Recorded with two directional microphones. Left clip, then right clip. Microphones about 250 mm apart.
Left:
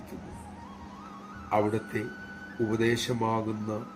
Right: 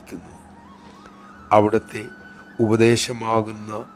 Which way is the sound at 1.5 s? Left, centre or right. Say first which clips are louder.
Right 11 dB; right.